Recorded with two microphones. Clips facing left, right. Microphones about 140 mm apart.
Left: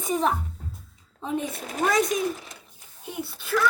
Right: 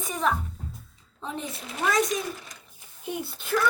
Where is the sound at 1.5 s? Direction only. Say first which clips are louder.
Left 1 dB; 45° left (ahead or behind).